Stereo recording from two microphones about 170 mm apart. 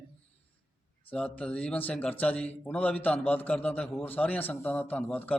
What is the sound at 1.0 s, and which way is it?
A man's voice, 10° left (ahead or behind).